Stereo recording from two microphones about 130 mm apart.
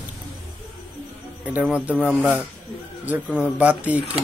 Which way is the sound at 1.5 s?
10° right (ahead or behind).